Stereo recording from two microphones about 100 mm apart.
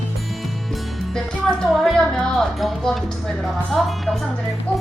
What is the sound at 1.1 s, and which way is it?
Speech, 5° left (ahead or behind).